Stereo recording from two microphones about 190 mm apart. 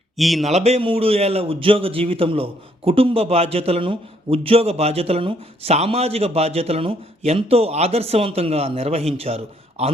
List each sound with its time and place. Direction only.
0.2 s speech: centre (ahead or behind)
0.5 s a man's voice: 35° right (ahead or behind)